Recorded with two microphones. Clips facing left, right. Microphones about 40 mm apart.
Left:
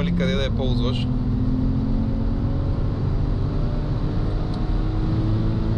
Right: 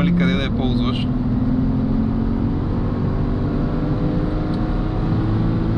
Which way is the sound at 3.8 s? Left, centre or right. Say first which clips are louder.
Right 7 dB; right.